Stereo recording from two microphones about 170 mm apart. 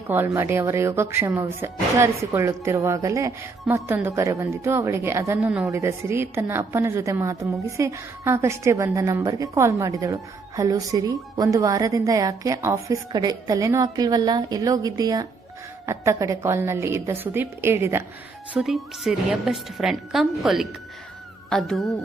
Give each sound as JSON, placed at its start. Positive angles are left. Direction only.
{"t": 0.1, "sound": "speech", "side_deg": -15}
{"t": 5.4, "sound": "a woman's voice", "side_deg": -5}
{"t": 5.7, "sound": "a woman's voice", "side_deg": -15}
{"t": 18.5, "sound": "a woman's voice", "side_deg": 0}